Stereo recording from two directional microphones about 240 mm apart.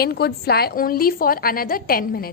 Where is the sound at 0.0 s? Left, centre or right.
Left.